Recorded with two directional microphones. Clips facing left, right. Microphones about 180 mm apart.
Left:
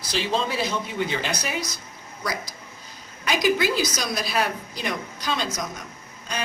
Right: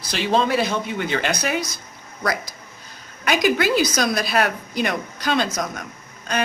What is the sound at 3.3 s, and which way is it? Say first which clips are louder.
A woman's voice: right 3 dB; 65° right (ahead or behind).